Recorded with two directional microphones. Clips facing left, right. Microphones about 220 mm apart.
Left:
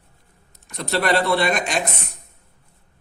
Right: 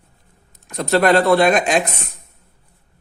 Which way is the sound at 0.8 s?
50° right (ahead or behind).